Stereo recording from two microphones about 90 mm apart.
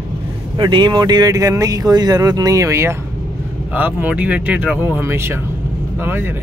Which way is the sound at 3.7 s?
15° right (ahead or behind).